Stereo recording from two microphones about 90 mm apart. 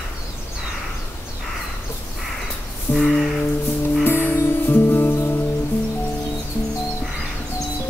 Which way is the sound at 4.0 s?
25° left (ahead or behind).